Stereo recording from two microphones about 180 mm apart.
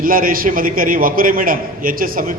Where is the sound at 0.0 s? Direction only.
50° right (ahead or behind).